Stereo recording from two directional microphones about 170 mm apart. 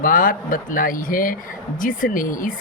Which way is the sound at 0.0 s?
55° left (ahead or behind).